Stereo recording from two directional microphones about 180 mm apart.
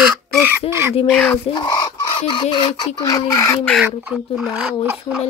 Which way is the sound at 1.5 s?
25° left (ahead or behind).